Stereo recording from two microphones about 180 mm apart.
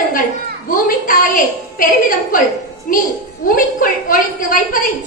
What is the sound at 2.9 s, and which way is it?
A woman's voice, 50° left (ahead or behind).